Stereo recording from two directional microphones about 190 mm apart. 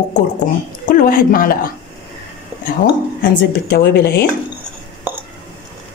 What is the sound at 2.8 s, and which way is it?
Speech, 65° left (ahead or behind).